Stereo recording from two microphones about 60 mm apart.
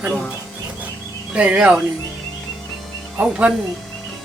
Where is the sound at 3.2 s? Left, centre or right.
Right.